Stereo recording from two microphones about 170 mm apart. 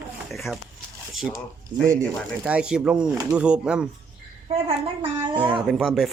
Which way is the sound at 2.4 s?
5° right (ahead or behind).